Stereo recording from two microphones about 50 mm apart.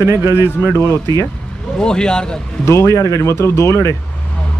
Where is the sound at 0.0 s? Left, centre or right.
Right.